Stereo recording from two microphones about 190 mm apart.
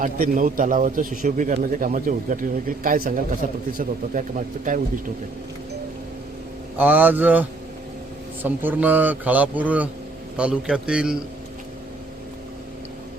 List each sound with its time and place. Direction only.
0.0 s a man's voice: 45° right (ahead or behind)
6.7 s a man's voice: 10° right (ahead or behind)